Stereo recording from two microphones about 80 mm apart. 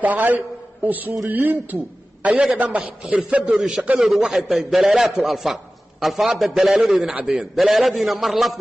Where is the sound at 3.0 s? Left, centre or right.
Centre.